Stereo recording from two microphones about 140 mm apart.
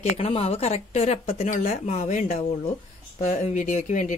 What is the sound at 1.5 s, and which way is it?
Speech, 60° left (ahead or behind).